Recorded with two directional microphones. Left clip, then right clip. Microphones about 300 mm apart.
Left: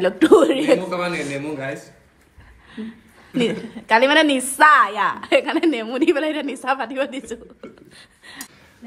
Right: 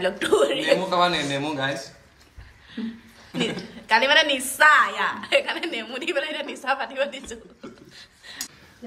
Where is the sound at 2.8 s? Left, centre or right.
Centre.